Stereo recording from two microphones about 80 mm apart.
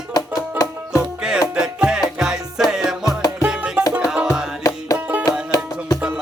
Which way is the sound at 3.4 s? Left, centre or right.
Centre.